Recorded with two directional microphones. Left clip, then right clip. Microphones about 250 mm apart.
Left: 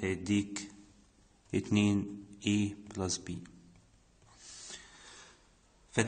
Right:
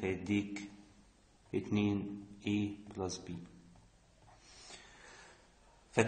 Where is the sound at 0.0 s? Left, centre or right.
Left.